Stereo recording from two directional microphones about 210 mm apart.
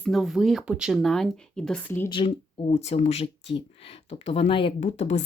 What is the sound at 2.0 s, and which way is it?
Speech, 25° left (ahead or behind).